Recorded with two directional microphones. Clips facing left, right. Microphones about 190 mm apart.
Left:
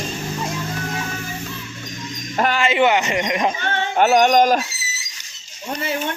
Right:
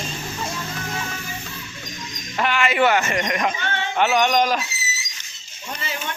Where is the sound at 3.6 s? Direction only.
45° left (ahead or behind).